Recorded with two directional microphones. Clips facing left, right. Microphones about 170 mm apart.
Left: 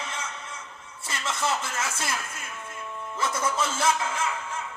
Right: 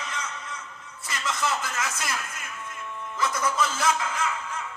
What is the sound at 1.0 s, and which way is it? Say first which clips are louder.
Speech: even; 25° left (ahead or behind).